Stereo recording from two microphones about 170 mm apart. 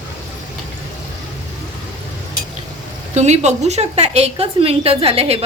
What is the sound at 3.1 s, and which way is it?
A woman's voice, 40° right (ahead or behind).